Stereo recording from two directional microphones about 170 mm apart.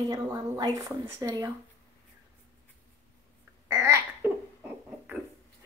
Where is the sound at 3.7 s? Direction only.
15° right (ahead or behind).